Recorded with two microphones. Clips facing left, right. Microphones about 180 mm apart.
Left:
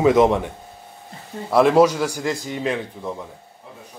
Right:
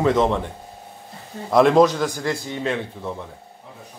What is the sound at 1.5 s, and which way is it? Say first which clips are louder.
Speech: even; 5° left (ahead or behind).